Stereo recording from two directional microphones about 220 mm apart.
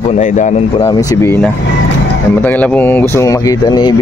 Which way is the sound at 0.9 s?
15° left (ahead or behind).